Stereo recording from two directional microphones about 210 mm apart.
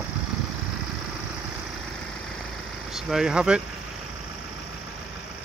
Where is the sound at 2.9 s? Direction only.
Centre (ahead or behind).